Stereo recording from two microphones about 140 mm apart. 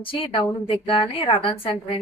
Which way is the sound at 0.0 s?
40° left (ahead or behind).